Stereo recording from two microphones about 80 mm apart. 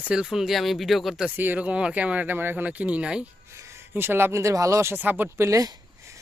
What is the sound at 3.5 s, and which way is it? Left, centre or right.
Speech, right.